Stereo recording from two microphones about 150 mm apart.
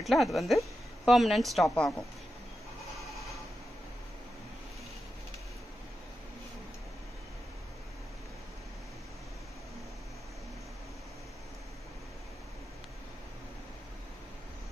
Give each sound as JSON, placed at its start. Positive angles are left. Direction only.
{"t": 0.0, "sound": "a woman's voice", "side_deg": 0}